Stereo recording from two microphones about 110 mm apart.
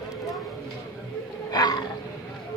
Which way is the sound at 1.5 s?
35° left (ahead or behind).